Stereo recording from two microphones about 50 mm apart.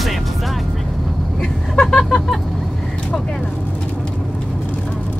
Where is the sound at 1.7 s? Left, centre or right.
Centre.